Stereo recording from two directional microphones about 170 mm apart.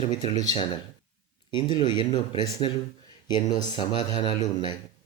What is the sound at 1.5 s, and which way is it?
Speech, 25° left (ahead or behind).